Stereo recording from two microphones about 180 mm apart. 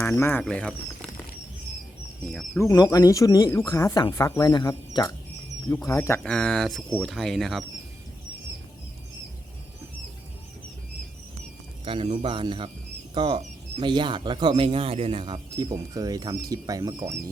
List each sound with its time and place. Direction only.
0.0 s speech: 15° left (ahead or behind)
2.2 s speech: 5° left (ahead or behind)
2.6 s speech: 20° left (ahead or behind); by 7.6 s centre (ahead or behind)
11.9 s speech: 30° right (ahead or behind)